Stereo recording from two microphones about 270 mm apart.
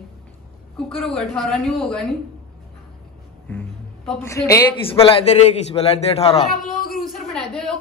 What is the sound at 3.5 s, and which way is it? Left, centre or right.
A man's voice, centre.